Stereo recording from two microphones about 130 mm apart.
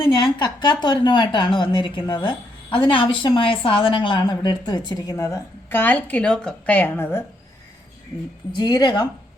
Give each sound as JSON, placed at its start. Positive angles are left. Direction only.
{"t": 0.0, "sound": "a woman's voice", "side_deg": 35}
{"t": 5.8, "sound": "a woman's voice", "side_deg": 10}
{"t": 8.5, "sound": "a woman's voice", "side_deg": 35}